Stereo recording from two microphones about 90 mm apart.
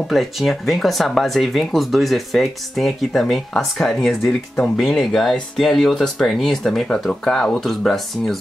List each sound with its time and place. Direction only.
0.1 s speech: centre (ahead or behind)